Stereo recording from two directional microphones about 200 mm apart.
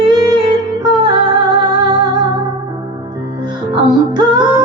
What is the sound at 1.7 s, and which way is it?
Music, 20° right (ahead or behind).